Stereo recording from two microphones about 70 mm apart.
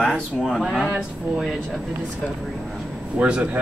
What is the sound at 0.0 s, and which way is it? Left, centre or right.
Speech, centre.